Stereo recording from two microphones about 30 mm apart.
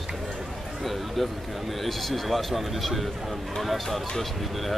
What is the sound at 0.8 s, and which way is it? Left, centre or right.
Speech, centre.